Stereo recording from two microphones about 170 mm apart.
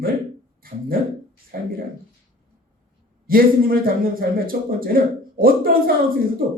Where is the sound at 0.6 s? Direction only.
60° right (ahead or behind).